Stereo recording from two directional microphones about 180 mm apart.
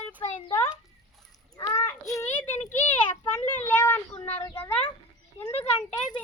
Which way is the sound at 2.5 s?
40° left (ahead or behind).